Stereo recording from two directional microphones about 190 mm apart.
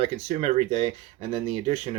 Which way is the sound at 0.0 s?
35° right (ahead or behind).